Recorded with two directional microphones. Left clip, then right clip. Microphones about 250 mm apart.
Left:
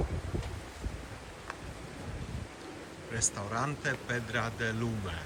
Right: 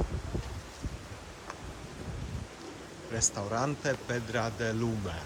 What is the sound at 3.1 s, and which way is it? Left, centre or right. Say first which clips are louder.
Speech: right 2 dB; centre.